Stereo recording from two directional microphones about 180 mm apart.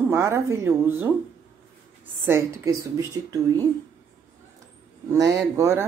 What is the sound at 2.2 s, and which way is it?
Speech, 15° right (ahead or behind).